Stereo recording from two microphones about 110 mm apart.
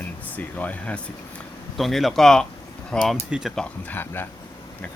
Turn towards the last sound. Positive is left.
turn(degrees=20)  # may be behind; listen again after turning